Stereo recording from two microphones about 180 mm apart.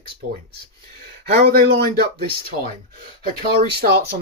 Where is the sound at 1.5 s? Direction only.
60° right (ahead or behind).